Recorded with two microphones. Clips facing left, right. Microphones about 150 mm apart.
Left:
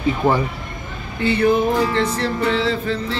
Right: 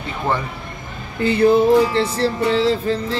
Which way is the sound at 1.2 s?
35° right (ahead or behind).